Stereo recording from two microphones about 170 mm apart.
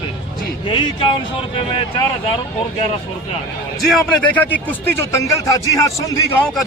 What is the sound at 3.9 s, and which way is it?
Speech, 10° left (ahead or behind).